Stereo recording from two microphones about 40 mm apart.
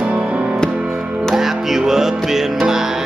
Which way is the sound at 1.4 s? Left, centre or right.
Centre.